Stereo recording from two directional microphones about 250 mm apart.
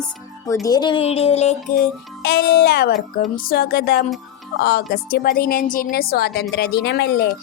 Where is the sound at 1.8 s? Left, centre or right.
Left.